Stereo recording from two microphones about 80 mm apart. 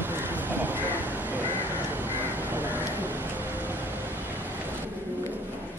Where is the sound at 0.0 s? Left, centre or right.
Right.